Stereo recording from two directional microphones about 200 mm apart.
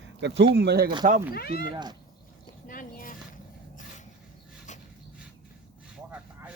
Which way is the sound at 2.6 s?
45° left (ahead or behind).